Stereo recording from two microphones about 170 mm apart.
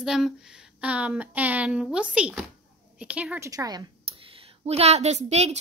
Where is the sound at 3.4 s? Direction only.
20° right (ahead or behind).